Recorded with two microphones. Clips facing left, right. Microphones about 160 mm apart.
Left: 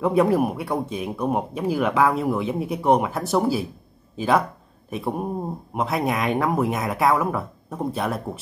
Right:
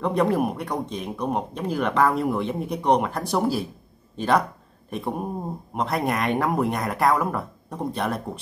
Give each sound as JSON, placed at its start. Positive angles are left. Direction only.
{"t": 0.0, "sound": "speech", "side_deg": 5}